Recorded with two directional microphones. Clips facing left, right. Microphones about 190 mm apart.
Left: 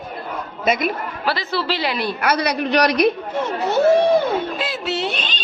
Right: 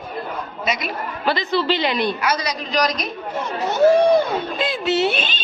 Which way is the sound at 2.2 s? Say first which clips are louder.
Left 4 dB; 60° left (ahead or behind).